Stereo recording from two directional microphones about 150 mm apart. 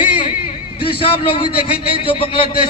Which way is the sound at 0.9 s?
35° left (ahead or behind).